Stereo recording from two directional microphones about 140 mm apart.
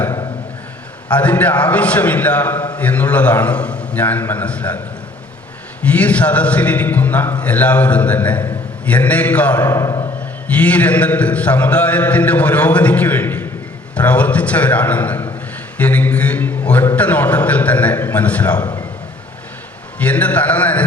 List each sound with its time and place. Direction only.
1.1 s a man's voice: 10° left (ahead or behind)
5.8 s a man's voice: 10° left (ahead or behind)
10.5 s a man's voice: 10° left (ahead or behind)
18.6 s a sound: 30° left (ahead or behind)
20.0 s a man's voice: 10° left (ahead or behind)